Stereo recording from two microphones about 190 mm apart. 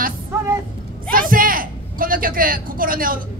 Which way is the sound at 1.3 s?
50° right (ahead or behind).